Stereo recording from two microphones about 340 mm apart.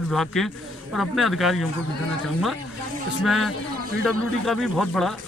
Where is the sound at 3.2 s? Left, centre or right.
Centre.